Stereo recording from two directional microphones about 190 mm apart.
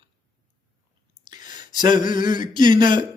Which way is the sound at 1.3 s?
20° right (ahead or behind).